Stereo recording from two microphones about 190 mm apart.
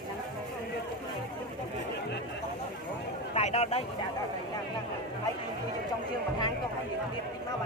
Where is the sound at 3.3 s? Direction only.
35° left (ahead or behind).